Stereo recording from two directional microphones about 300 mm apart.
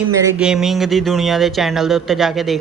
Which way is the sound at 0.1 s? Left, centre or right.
Centre.